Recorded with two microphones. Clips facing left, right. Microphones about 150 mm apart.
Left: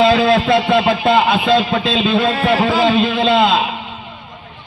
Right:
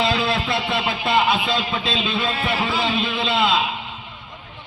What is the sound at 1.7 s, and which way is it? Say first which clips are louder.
Speech: left 7 dB; 65° left (ahead or behind).